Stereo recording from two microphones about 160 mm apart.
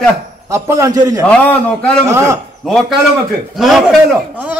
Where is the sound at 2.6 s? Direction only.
Centre (ahead or behind).